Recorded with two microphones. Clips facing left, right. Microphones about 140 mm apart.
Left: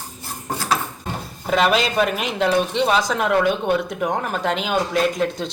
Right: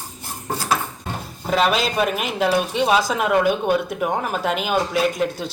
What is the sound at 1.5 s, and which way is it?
Speech, centre (ahead or behind).